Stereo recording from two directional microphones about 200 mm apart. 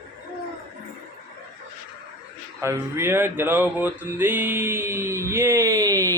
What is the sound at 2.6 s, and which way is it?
Speech, 15° right (ahead or behind).